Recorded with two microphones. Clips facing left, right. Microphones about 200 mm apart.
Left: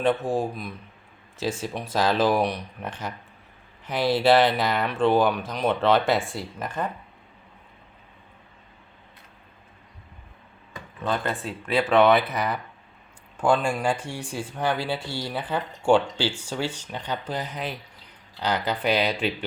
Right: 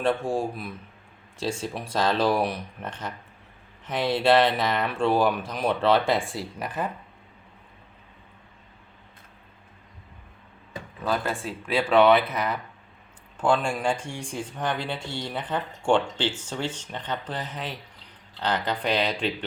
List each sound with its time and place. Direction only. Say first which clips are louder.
0.0 s speech: left 2 dB; centre (ahead or behind)
4.1 s speech: left 1 dB; 5° left (ahead or behind)
11.0 s speech: even; 5° right (ahead or behind)